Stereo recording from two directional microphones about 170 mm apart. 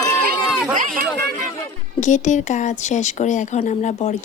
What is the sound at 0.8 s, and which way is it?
Speech, 50° right (ahead or behind).